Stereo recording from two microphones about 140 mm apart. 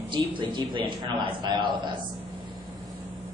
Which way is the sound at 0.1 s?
35° right (ahead or behind).